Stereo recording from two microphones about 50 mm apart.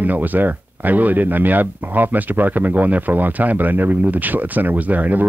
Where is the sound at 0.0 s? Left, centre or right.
Right.